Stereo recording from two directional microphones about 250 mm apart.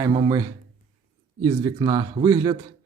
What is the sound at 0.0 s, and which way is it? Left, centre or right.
Speech, centre.